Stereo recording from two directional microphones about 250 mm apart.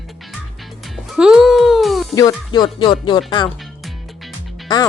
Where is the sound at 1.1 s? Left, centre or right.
Centre.